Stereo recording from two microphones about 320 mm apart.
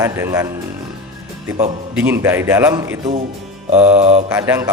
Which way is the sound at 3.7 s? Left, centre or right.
Centre.